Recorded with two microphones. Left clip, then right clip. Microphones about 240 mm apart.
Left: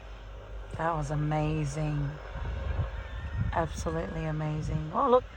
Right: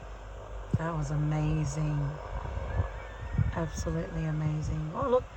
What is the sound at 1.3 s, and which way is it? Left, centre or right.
Speech, centre.